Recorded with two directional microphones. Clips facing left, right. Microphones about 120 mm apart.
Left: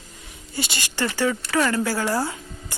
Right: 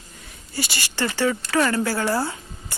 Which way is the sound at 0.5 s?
20° left (ahead or behind).